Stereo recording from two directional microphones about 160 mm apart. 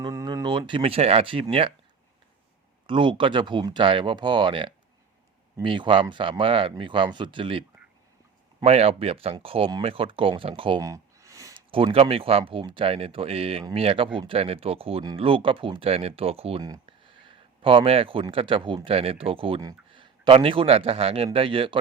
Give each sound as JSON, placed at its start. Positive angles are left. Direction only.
{"t": 0.0, "sound": "speech", "side_deg": -25}
{"t": 2.8, "sound": "speech", "side_deg": -30}
{"t": 8.6, "sound": "speech", "side_deg": -40}
{"t": 10.8, "sound": "a sound", "side_deg": -20}
{"t": 11.7, "sound": "a man's voice", "side_deg": -35}